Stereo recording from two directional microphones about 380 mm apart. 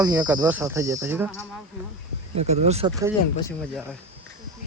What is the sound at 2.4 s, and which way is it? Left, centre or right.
Speech, centre.